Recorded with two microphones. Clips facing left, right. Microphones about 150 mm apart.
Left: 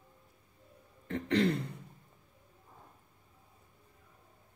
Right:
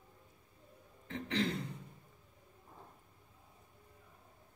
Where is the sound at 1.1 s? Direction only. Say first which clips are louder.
Left 7 dB; 60° left (ahead or behind).